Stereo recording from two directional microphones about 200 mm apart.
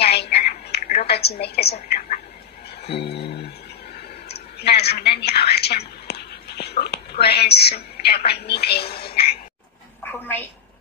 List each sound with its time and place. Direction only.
0.0 s telephone: 55° left (ahead or behind)
1.0 s a woman's voice: 55° left (ahead or behind)
1.7 s a woman's voice: 40° left (ahead or behind)
3.0 s a sound: 55° left (ahead or behind)
4.3 s a woman's voice: 55° left (ahead or behind)
8.8 s speech: 30° left (ahead or behind)
10.0 s a woman's voice: 10° left (ahead or behind)